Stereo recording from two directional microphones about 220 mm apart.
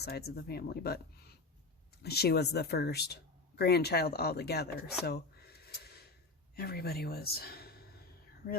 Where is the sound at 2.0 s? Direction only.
45° left (ahead or behind).